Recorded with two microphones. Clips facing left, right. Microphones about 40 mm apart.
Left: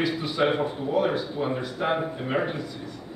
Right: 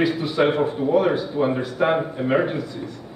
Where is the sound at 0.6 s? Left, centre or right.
Right.